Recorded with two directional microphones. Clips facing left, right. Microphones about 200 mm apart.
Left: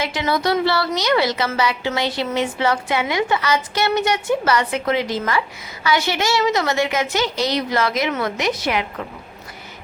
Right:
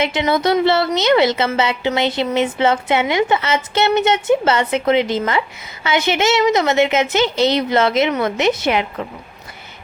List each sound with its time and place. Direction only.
0.0 s a woman's voice: 20° right (ahead or behind)